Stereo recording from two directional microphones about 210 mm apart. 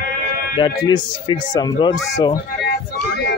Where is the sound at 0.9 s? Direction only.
20° left (ahead or behind).